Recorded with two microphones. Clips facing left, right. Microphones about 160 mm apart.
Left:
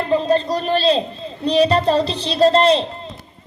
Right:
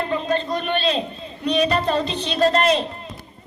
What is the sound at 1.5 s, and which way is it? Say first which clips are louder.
A child's voice: left 5 dB; 30° left (ahead or behind).